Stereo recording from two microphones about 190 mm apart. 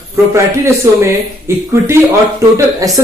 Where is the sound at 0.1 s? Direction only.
15° right (ahead or behind).